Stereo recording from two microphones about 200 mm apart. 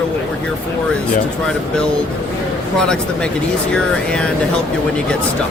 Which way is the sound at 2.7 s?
5° left (ahead or behind).